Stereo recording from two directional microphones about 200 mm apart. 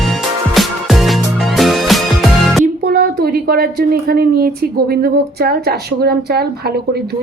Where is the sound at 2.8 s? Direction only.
45° right (ahead or behind).